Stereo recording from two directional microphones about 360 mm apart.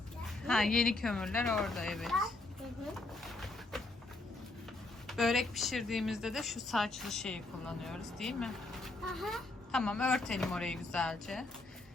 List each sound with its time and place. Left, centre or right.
0.4 s speech: centre
2.9 s a sound: centre
5.0 s speech: centre